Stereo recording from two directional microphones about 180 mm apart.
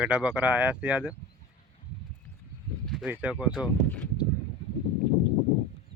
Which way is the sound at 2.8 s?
Centre (ahead or behind).